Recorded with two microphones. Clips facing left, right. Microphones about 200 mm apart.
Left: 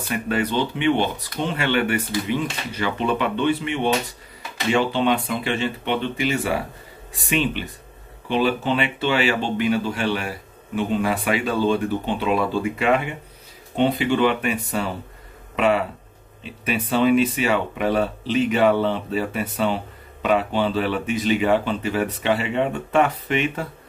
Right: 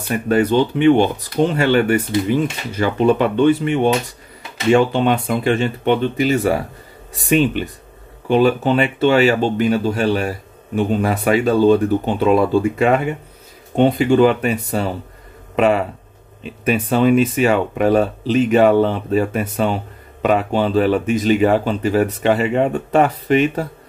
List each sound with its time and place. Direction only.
0.1 s speech: 45° right (ahead or behind)